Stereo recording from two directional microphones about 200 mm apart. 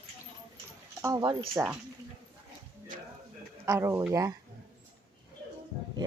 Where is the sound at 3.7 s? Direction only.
15° right (ahead or behind).